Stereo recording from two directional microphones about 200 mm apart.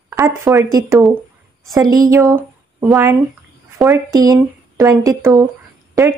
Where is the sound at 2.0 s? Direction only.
15° right (ahead or behind).